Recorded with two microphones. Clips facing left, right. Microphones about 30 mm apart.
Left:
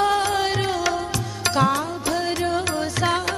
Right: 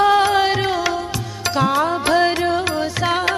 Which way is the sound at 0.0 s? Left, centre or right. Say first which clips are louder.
Right 6 dB; right.